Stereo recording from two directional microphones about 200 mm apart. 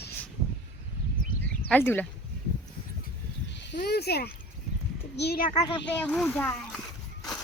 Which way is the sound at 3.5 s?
60° left (ahead or behind).